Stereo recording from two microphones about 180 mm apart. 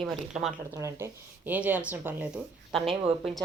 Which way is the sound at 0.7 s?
15° right (ahead or behind).